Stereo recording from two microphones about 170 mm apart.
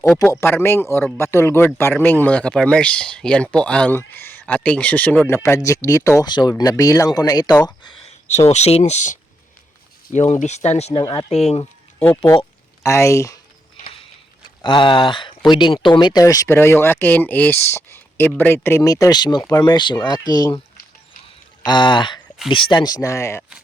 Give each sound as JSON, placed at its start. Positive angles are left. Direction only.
{"t": 0.0, "sound": "speech", "side_deg": 10}
{"t": 8.4, "sound": "speech", "side_deg": 40}
{"t": 11.0, "sound": "speech", "side_deg": 25}
{"t": 11.3, "sound": "speech", "side_deg": 40}
{"t": 11.9, "sound": "speech", "side_deg": 15}
{"t": 14.6, "sound": "speech", "side_deg": 30}
{"t": 21.6, "sound": "speech", "side_deg": 25}
{"t": 23.4, "sound": "a sound", "side_deg": -5}